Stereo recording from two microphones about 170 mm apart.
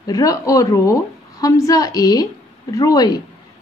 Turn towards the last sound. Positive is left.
turn(degrees=20)  # may be behind; listen again after turning